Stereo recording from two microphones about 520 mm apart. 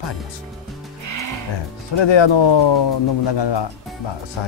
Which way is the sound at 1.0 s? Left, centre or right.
Right.